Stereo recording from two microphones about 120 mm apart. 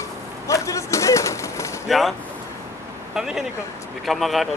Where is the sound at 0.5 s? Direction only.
25° left (ahead or behind).